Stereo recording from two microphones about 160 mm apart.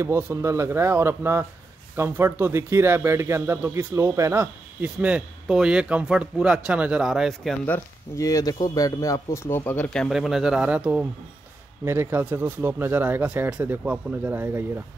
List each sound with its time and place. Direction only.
0.0 s speech: 15° right (ahead or behind)
7.6 s speech: 15° left (ahead or behind); by 14.6 s 10° right (ahead or behind)